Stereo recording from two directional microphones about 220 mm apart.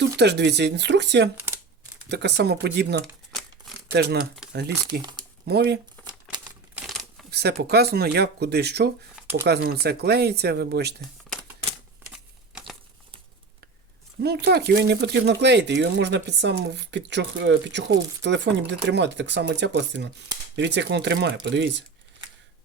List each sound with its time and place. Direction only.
0.2 s speech: 50° right (ahead or behind)
6.7 s crumpling: centre (ahead or behind)
7.3 s speech: 50° right (ahead or behind)
12.1 s a sound: centre (ahead or behind)
14.2 s speech: 50° right (ahead or behind)